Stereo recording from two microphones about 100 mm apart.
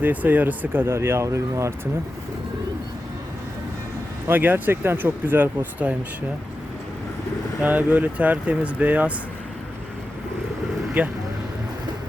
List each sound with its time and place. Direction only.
0.0 s speech: 15° right (ahead or behind)
4.3 s speech: 20° right (ahead or behind)
7.6 s speech: 15° right (ahead or behind)
11.0 s speech: 15° right (ahead or behind)